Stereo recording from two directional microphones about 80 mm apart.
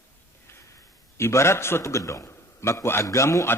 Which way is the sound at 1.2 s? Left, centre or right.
Left.